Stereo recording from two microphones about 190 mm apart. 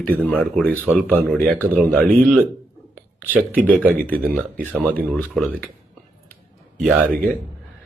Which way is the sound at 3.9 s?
50° right (ahead or behind).